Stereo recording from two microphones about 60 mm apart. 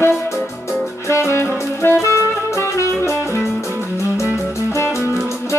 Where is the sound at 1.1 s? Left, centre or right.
Left.